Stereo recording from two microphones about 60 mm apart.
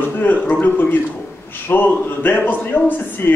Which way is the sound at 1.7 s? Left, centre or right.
Left.